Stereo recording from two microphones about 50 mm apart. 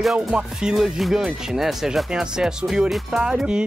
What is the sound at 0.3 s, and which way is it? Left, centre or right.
Speech, centre.